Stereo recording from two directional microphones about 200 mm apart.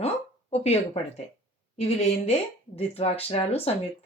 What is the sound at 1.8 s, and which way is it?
Speech, 30° left (ahead or behind).